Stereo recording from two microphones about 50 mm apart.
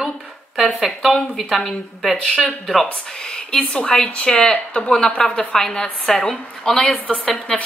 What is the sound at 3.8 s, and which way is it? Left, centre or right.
A woman's voice, centre.